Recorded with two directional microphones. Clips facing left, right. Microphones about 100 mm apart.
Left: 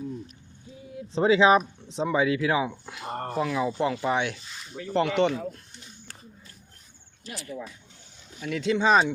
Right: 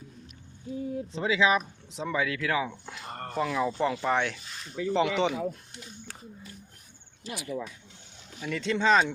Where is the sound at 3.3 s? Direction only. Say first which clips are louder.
Left 1 dB; 5° left (ahead or behind).